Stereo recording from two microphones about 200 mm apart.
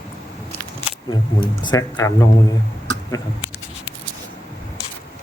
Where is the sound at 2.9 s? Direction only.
15° left (ahead or behind).